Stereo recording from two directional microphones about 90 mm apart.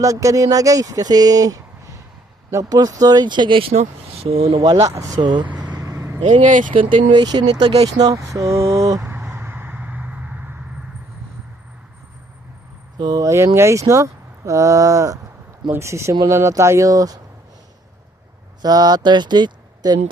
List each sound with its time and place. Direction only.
0.0 s speech: 35° right (ahead or behind); by 4.6 s 90° right
4.8 s speech: 40° right (ahead or behind)
5.2 s speech: 60° right (ahead or behind)
5.7 s vehicle: 40° right (ahead or behind)
6.9 s speech: 55° right (ahead or behind); by 9.0 s 35° right (ahead or behind)
9.0 s a sound: 25° right (ahead or behind)
13.0 s speech: 50° right (ahead or behind)
13.2 s speech: 30° right (ahead or behind)
18.6 s speech: 45° right (ahead or behind)